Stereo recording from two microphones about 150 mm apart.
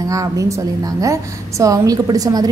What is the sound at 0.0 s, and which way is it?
A woman's voice, 20° right (ahead or behind).